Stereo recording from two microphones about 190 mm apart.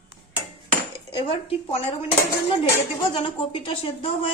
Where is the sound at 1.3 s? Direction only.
30° left (ahead or behind).